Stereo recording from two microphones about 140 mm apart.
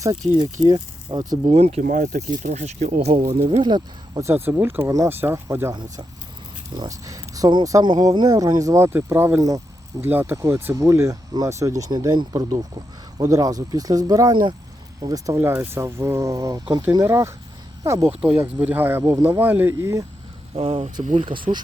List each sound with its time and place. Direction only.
0.0 s speech: 30° right (ahead or behind)
1.5 s speech: 50° right (ahead or behind)
1.8 s speech: 65° right (ahead or behind); by 3.6 s 45° right (ahead or behind)
3.6 s speech: 30° right (ahead or behind)
4.3 s speech: 15° right (ahead or behind)
6.7 s speech: 25° right (ahead or behind)
18.2 s speech: 10° right (ahead or behind)
20.6 s speech: 45° right (ahead or behind)